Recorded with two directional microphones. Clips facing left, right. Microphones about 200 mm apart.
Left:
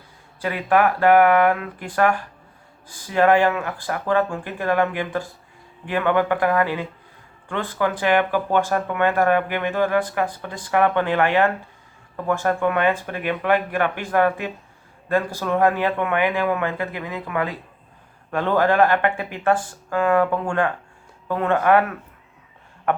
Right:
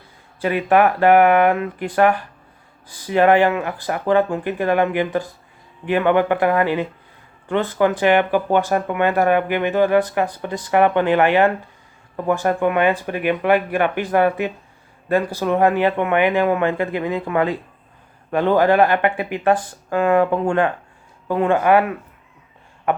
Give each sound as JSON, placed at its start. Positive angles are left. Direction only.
{"t": 0.4, "sound": "speech", "side_deg": -20}
{"t": 18.3, "sound": "speech", "side_deg": -15}